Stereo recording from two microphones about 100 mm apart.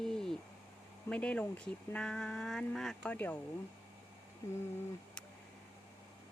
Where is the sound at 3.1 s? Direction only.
15° left (ahead or behind).